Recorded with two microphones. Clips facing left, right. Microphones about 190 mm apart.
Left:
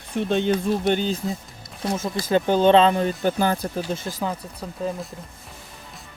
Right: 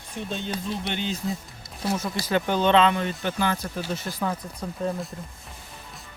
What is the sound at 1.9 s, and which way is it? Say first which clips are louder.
Speech: left 3 dB; 25° left (ahead or behind).